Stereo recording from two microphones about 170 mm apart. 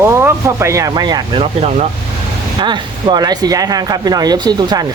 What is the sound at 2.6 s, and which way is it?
Speech, 25° right (ahead or behind).